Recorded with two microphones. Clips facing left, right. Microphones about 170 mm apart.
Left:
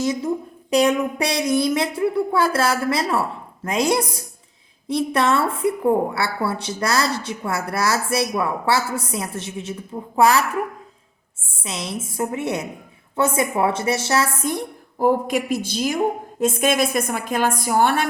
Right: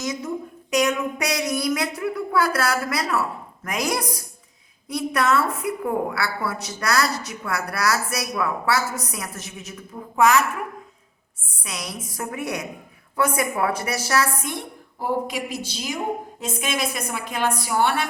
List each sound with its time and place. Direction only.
0.0 s a woman's voice: 30° left (ahead or behind)
14.5 s a woman's voice: 50° left (ahead or behind)